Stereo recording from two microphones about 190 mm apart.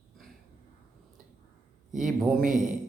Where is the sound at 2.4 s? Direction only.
45° right (ahead or behind).